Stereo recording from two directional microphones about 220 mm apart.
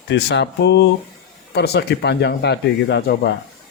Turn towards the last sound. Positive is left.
turn(degrees=50)  # may be behind; listen again after turning